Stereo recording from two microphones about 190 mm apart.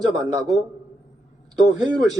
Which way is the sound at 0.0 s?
20° right (ahead or behind).